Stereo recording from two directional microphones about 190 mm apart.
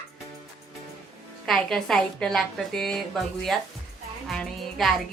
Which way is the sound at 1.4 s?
5° left (ahead or behind).